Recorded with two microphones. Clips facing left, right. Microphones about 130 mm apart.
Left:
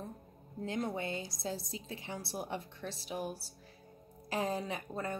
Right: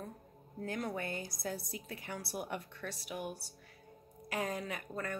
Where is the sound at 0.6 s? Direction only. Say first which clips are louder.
Left 2 dB; 25° left (ahead or behind).